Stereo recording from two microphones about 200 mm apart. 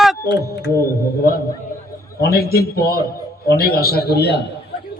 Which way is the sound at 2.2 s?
50° left (ahead or behind).